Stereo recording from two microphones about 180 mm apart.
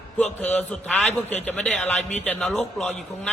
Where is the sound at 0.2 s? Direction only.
10° left (ahead or behind).